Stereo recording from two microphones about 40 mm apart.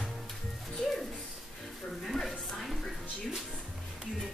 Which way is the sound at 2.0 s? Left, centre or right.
Centre.